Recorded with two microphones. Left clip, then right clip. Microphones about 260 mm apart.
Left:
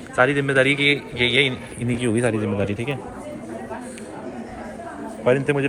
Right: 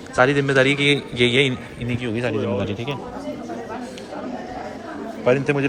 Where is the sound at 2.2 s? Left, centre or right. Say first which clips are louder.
Right 1 dB; right.